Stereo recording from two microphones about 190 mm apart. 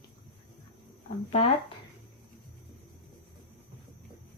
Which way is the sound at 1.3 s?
30° left (ahead or behind).